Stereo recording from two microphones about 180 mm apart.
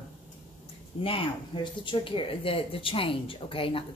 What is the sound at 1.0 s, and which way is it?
Speech, 30° left (ahead or behind).